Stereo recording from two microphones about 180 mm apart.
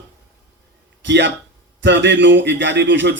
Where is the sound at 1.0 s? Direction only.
80° right.